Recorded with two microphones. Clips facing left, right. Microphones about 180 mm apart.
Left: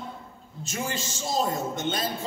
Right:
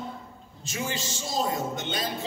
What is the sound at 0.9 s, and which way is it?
A man's voice, 45° left (ahead or behind).